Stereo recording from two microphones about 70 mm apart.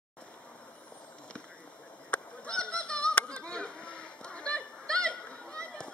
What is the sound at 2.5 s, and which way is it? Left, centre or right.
Honk, centre.